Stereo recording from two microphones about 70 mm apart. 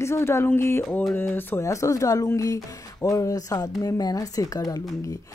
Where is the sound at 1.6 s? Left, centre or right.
Left.